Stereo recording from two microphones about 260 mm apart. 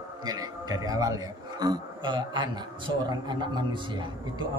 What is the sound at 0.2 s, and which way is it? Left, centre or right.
A man's voice, centre.